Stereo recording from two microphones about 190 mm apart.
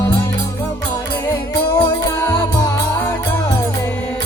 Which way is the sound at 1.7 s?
20° left (ahead or behind).